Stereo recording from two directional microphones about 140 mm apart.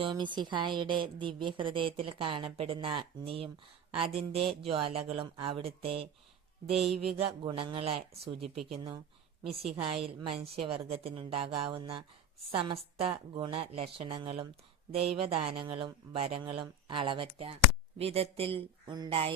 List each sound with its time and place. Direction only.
0.0 s a woman's voice: 35° right (ahead or behind)
6.7 s music: centre (ahead or behind)
7.2 s speech: 40° right (ahead or behind)
9.7 s a woman's voice: 40° right (ahead or behind)